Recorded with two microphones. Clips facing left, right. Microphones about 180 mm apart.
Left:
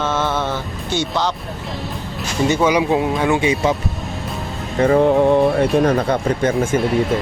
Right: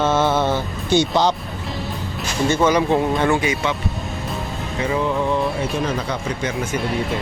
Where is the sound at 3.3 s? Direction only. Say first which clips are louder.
Left 2 dB; 25° left (ahead or behind).